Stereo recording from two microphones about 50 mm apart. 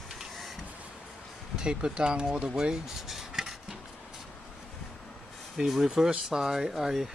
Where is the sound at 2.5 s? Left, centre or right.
Centre.